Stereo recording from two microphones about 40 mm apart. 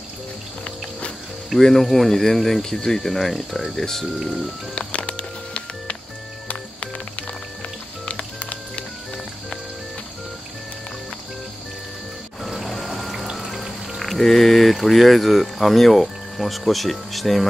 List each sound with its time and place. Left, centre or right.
1.6 s speech: centre
4.7 s music: left
8.0 s music: left
12.4 s music: centre
13.5 s speech: centre